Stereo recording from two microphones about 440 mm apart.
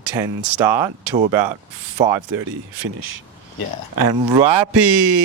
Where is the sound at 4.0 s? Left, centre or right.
Right.